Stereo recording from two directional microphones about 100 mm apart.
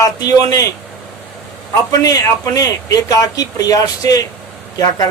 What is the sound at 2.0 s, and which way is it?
Speech, 40° left (ahead or behind).